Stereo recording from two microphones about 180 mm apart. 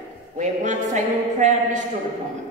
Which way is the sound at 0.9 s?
40° right (ahead or behind).